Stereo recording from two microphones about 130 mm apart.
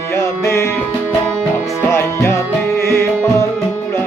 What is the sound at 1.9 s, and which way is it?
Music, 20° left (ahead or behind).